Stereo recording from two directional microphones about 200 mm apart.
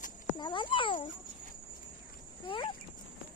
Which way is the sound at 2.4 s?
25° left (ahead or behind).